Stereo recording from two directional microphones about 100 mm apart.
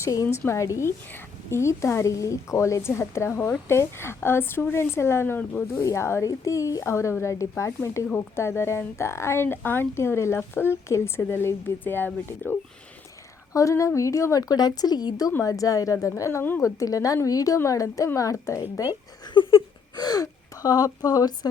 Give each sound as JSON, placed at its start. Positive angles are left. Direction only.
{"t": 0.0, "sound": "a woman's voice", "side_deg": 30}
{"t": 13.5, "sound": "a woman's voice", "side_deg": 30}
{"t": 19.2, "sound": "a sound", "side_deg": 55}
{"t": 20.0, "sound": "speech", "side_deg": 40}